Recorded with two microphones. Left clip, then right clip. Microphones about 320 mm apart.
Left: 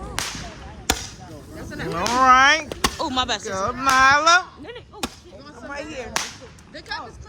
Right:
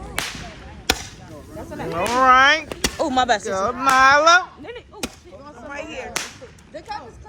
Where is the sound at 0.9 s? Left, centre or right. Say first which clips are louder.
Right 2 dB; centre.